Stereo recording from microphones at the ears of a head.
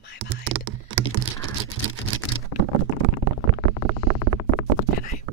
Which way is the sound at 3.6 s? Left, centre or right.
Right.